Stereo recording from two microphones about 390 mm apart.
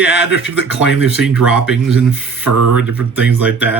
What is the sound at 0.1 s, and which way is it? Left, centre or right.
Speech, left.